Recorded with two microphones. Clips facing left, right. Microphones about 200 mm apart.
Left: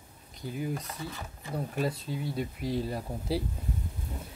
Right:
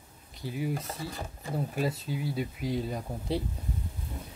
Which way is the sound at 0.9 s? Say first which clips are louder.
Right 2 dB; 30° right (ahead or behind).